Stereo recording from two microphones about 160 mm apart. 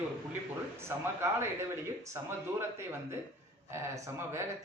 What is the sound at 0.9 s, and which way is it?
Speech, 15° right (ahead or behind).